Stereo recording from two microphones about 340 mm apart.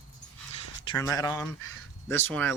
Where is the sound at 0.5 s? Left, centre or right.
Centre.